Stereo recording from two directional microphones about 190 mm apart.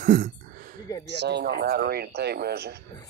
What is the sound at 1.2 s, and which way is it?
Speech, 60° right (ahead or behind).